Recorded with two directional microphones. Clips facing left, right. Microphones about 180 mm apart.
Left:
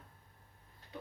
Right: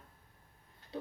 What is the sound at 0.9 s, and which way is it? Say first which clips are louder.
Pig: right 6 dB; 30° right (ahead or behind).